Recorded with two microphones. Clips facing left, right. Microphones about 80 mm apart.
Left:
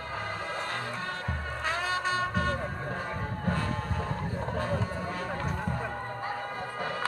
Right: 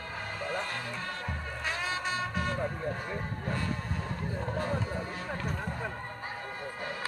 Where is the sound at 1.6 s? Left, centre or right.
Left.